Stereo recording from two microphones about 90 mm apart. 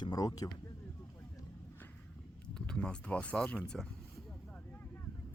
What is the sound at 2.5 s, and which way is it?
Speech, 10° left (ahead or behind).